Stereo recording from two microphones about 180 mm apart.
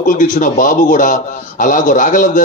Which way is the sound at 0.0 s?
45° left (ahead or behind).